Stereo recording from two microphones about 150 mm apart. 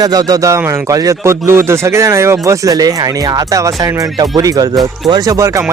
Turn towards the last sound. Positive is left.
turn(degrees=-20)  # may be behind; listen again after turning